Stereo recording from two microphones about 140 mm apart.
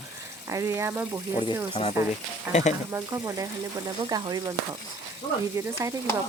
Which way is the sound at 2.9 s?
20° right (ahead or behind).